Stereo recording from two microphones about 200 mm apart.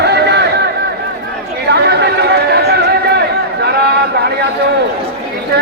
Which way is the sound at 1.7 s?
55° right (ahead or behind).